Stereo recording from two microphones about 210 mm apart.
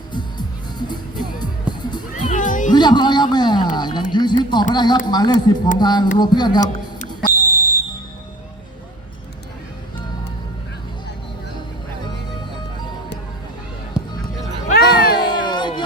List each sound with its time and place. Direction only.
0.1 s music: 20° left (ahead or behind)
2.1 s music: 35° left (ahead or behind)
2.7 s a sound: 20° left (ahead or behind)
4.1 s speech: 20° left (ahead or behind)
7.3 s music: 10° right (ahead or behind)
14.0 s music: 5° right (ahead or behind)
14.7 s music: 45° left (ahead or behind)
15.3 s a sound: 20° left (ahead or behind)